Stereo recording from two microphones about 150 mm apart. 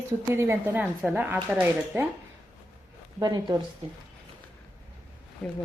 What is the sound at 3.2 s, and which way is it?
Speech, 25° right (ahead or behind).